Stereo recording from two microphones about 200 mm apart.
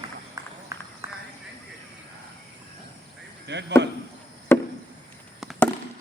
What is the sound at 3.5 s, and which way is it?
Speech, 60° right (ahead or behind).